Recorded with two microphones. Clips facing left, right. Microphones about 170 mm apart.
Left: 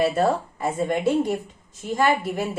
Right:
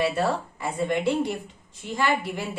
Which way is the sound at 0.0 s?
45° left (ahead or behind).